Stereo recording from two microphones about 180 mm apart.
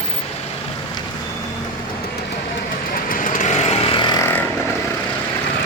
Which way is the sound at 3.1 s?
45° left (ahead or behind).